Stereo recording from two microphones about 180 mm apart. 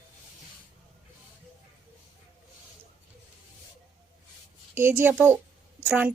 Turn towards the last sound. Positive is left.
turn(degrees=-10)  # may be behind; listen again after turning